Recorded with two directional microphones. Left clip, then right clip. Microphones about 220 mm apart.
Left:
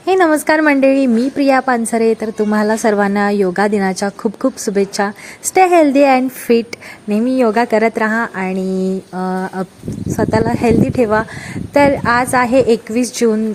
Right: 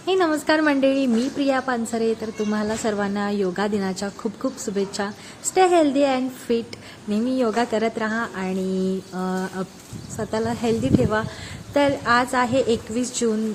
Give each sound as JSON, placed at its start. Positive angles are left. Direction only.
{"t": 0.0, "sound": "speech", "side_deg": 35}